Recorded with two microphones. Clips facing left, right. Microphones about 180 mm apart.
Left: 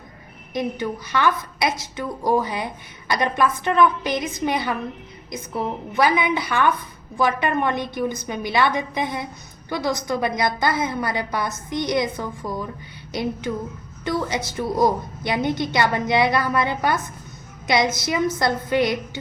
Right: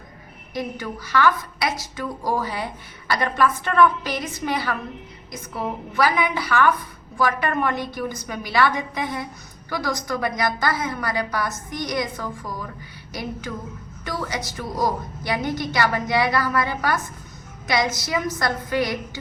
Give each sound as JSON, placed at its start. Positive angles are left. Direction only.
{"t": 0.5, "sound": "a woman's voice", "side_deg": 20}
{"t": 5.9, "sound": "a woman's voice", "side_deg": 20}
{"t": 14.0, "sound": "a woman's voice", "side_deg": 25}